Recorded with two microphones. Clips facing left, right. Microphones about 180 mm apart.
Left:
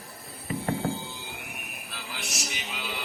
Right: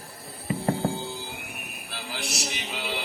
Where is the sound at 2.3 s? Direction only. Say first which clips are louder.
Right 3 dB; 70° right (ahead or behind).